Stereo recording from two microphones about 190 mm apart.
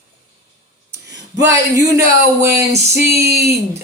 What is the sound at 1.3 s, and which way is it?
Speech, 15° right (ahead or behind).